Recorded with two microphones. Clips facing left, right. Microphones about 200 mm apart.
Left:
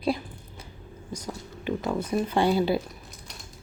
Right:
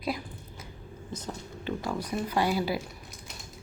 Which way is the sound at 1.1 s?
10° left (ahead or behind).